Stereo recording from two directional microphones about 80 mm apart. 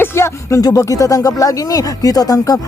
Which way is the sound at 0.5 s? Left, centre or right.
Left.